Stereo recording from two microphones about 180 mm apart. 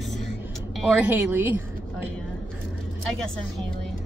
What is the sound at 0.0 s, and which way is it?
Vehicle, centre (ahead or behind).